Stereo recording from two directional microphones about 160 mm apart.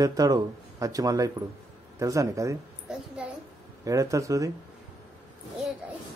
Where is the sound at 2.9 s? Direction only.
5° right (ahead or behind).